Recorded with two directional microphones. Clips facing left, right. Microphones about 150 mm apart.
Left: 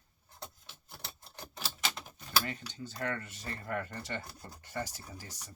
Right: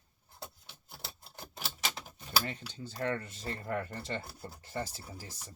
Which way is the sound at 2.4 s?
30° right (ahead or behind).